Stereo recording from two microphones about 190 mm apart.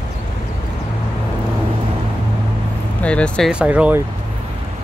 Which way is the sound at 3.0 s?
5° left (ahead or behind).